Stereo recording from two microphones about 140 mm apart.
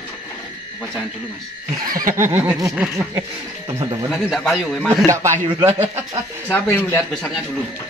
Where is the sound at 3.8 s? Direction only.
35° right (ahead or behind).